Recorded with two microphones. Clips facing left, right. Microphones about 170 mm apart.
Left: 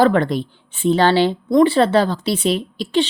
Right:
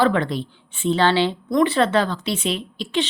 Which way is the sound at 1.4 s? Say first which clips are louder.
Left 5 dB; 30° left (ahead or behind).